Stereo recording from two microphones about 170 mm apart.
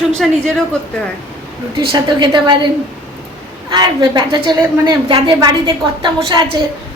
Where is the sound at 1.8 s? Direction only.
30° right (ahead or behind).